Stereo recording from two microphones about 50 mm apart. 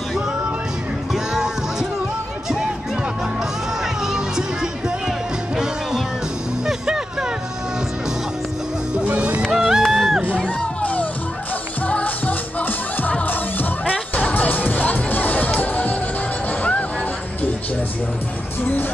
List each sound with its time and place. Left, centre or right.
1.1 s music: centre
4.1 s music: centre
6.6 s music: centre
9.5 s music: centre
9.9 s crowd: centre
10.3 s music: centre
10.8 s music: left